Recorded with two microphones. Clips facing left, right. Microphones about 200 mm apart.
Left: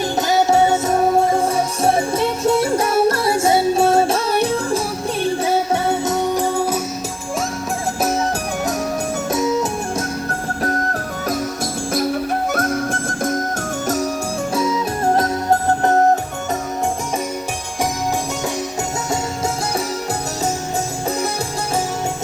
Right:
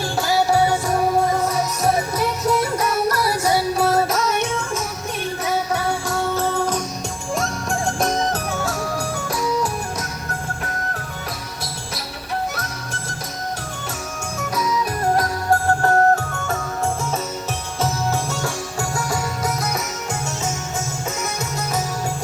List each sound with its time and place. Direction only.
0.2 s music: 20° left (ahead or behind)
9.3 s music: 25° left (ahead or behind)
12.5 s music: 50° left (ahead or behind)
14.5 s music: 25° left (ahead or behind)